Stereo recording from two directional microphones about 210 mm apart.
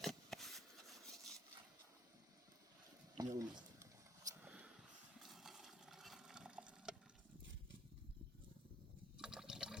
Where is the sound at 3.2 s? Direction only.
20° right (ahead or behind).